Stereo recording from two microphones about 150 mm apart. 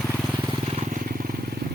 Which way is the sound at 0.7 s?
55° right (ahead or behind).